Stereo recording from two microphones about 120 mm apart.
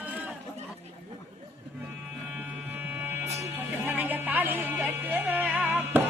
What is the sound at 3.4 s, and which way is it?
Music, 15° right (ahead or behind).